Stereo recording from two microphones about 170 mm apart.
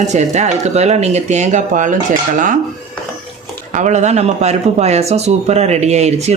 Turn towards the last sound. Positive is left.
turn(degrees=-40)  # may be behind; listen again after turning